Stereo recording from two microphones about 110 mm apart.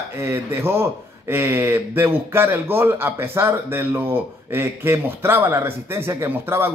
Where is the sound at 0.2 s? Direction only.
25° right (ahead or behind).